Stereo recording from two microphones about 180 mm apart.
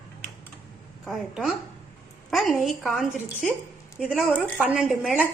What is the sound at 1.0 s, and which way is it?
Speech, 5° right (ahead or behind).